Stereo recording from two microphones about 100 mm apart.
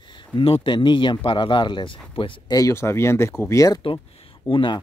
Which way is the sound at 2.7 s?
25° left (ahead or behind).